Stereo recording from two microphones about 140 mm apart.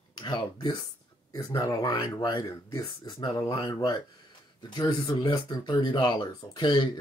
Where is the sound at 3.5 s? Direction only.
25° left (ahead or behind).